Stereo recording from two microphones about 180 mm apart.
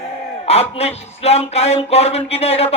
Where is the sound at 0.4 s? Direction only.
35° left (ahead or behind).